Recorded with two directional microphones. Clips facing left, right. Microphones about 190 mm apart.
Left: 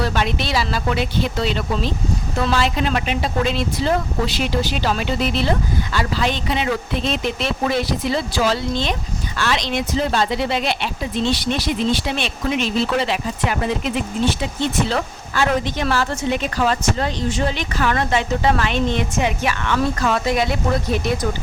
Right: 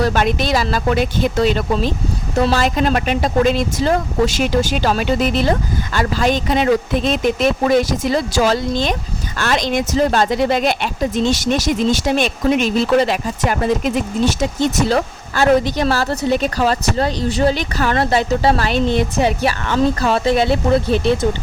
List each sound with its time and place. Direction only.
0.0 s speech: 45° right (ahead or behind); by 21.2 s 30° right (ahead or behind)